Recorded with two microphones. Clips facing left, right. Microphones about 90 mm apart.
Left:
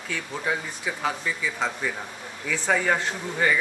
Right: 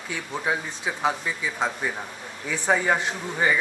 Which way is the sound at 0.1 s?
20° right (ahead or behind).